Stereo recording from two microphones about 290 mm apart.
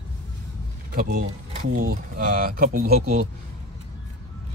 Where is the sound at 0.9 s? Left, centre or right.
Right.